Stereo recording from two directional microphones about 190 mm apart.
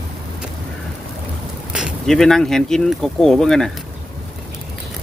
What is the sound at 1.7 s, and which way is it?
Speech, centre (ahead or behind).